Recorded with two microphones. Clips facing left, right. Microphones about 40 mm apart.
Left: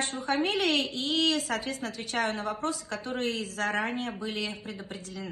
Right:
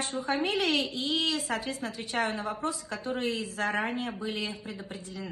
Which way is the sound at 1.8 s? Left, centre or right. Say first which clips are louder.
Even; right.